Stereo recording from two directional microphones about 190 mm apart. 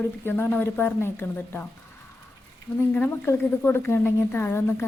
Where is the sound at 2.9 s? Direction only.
10° left (ahead or behind).